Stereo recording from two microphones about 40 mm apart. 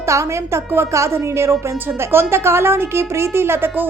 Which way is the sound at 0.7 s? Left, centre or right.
Right.